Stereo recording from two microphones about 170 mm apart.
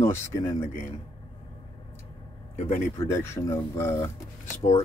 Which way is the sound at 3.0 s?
15° left (ahead or behind).